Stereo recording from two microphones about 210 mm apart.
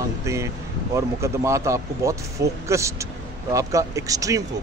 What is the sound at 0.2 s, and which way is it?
Speech, 15° right (ahead or behind).